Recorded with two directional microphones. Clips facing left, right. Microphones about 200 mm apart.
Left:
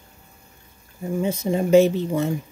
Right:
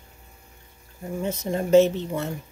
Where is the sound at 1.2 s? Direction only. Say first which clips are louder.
Left 3 dB; 10° left (ahead or behind).